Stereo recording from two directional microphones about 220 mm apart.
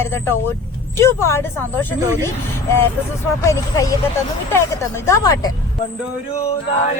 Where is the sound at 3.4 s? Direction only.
15° left (ahead or behind).